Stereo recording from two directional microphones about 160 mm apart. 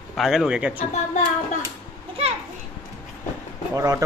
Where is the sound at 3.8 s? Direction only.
20° right (ahead or behind).